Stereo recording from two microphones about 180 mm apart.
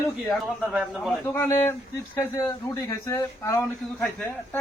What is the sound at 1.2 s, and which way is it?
Speech, 10° left (ahead or behind).